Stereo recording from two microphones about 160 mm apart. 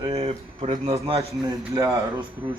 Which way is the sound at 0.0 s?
35° right (ahead or behind).